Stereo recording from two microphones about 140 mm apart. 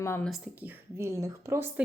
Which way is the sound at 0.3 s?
Centre (ahead or behind).